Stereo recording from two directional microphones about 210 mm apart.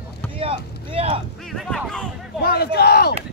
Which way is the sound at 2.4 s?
50° left (ahead or behind).